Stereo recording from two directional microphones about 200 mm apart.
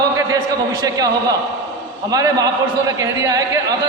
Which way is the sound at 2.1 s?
20° right (ahead or behind).